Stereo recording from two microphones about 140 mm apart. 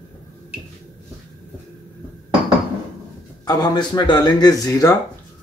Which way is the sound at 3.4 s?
30° left (ahead or behind).